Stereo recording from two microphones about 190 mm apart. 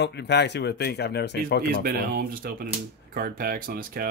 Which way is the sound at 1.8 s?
50° right (ahead or behind).